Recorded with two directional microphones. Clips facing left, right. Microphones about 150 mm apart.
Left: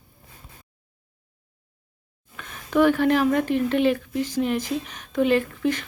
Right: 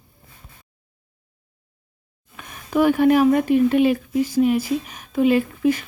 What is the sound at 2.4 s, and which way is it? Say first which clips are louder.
Speech: even; 10° right (ahead or behind).